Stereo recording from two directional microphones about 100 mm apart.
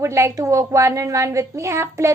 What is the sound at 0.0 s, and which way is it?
A woman's voice, 30° right (ahead or behind).